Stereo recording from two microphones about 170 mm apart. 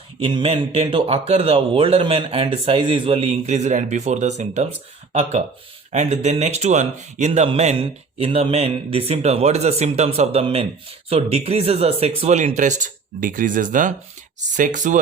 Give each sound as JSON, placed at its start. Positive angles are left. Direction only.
{"t": 0.2, "sound": "speech", "side_deg": -30}
{"t": 5.9, "sound": "speech", "side_deg": -45}